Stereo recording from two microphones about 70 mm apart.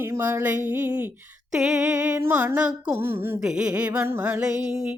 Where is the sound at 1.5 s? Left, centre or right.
Centre.